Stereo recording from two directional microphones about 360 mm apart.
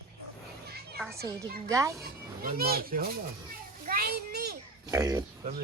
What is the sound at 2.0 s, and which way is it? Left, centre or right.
Speech, right.